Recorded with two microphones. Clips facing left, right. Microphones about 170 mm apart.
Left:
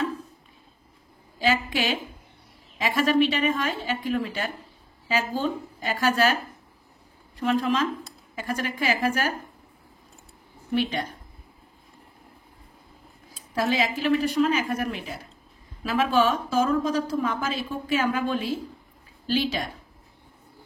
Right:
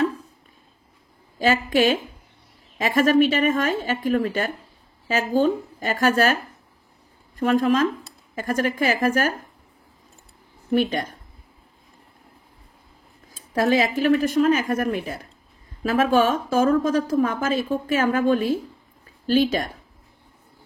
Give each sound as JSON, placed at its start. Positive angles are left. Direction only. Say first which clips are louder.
{"t": 1.4, "sound": "a woman's voice", "louder": "right 6 dB", "side_deg": -50}
{"t": 7.3, "sound": "a woman's voice", "louder": "right 5 dB", "side_deg": -45}
{"t": 10.7, "sound": "a woman's voice", "louder": "right 4 dB", "side_deg": -50}
{"t": 13.6, "sound": "a woman's voice", "louder": "right 5 dB", "side_deg": -50}